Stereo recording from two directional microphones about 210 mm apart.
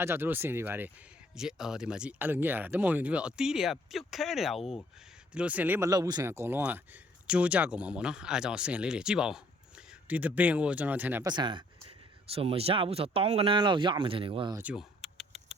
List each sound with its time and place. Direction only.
0.0 s speech: 10° right (ahead or behind)
11.3 s speech: 20° right (ahead or behind)
14.5 s typing: 5° right (ahead or behind)